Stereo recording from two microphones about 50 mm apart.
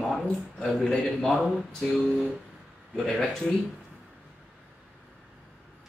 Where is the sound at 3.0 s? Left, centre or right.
Centre.